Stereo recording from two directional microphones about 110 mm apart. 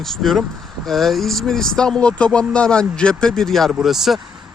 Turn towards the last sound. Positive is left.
turn(degrees=0)  # may be behind; listen again after turning